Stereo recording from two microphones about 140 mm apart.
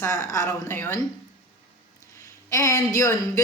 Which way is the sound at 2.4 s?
20° left (ahead or behind).